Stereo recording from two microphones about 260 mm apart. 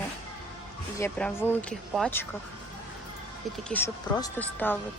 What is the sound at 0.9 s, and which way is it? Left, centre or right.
Speech, centre.